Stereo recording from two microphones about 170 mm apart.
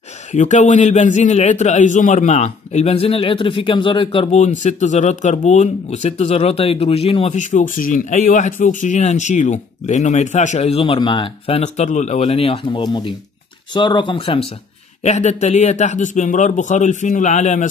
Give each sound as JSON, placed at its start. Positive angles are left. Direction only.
{"t": 0.3, "sound": "a man's voice", "side_deg": 45}